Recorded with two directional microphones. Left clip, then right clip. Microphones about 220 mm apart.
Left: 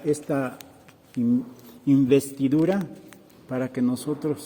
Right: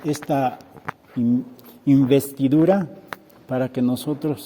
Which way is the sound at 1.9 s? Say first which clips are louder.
Right 2 dB; 45° right (ahead or behind).